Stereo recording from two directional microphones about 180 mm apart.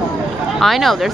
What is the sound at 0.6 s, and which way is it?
Speech, centre (ahead or behind).